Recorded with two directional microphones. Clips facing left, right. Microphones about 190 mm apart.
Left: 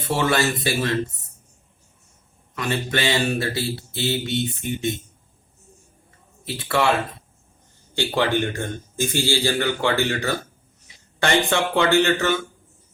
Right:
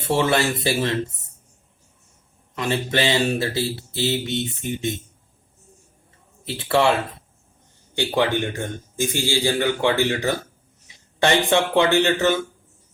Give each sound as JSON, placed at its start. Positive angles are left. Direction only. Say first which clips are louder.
{"t": 0.2, "sound": "speech", "louder": "left 1 dB", "side_deg": -25}
{"t": 2.6, "sound": "speech", "louder": "right 2 dB", "side_deg": -25}
{"t": 6.4, "sound": "speech", "louder": "right 2 dB", "side_deg": -25}
{"t": 7.9, "sound": "a man's voice", "louder": "even", "side_deg": -15}